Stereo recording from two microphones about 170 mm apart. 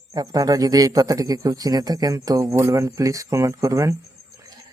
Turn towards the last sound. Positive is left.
turn(degrees=-20)  # may be behind; listen again after turning